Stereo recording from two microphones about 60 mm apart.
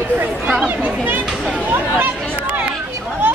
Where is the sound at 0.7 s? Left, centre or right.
Right.